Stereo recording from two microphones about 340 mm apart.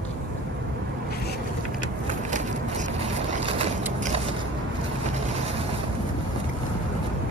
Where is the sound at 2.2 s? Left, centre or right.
Right.